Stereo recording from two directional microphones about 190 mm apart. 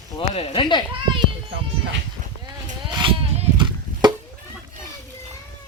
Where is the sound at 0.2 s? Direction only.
30° left (ahead or behind).